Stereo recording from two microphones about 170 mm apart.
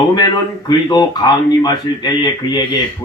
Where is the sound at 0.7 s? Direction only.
25° left (ahead or behind).